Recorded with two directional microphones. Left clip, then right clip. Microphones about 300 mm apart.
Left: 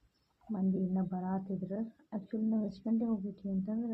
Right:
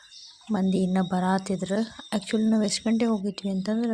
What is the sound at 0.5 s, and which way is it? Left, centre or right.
Speech, right.